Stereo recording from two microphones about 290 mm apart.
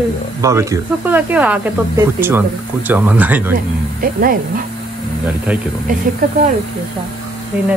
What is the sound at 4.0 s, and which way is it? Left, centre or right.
Speech, right.